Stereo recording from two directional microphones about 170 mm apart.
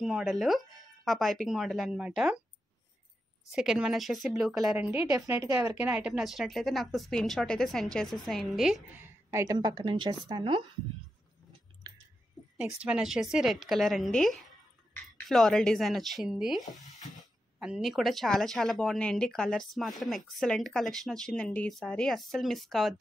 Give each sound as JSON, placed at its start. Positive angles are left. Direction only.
{"t": 0.0, "sound": "speech", "side_deg": 0}
{"t": 3.4, "sound": "speech", "side_deg": -5}
{"t": 4.9, "sound": "a woman's voice", "side_deg": -15}
{"t": 9.0, "sound": "a woman's voice", "side_deg": -20}
{"t": 12.5, "sound": "speech", "side_deg": -5}